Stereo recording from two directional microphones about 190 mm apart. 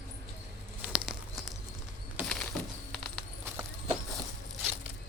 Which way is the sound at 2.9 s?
Centre (ahead or behind).